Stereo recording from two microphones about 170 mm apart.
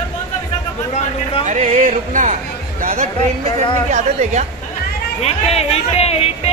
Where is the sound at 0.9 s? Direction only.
35° left (ahead or behind).